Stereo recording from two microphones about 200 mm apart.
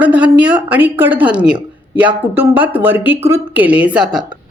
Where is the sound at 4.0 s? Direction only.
20° right (ahead or behind).